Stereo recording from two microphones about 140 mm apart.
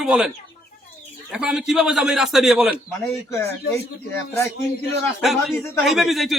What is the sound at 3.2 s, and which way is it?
Speech, 20° left (ahead or behind).